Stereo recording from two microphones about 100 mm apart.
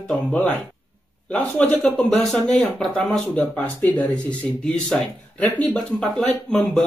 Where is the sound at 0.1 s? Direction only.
15° left (ahead or behind).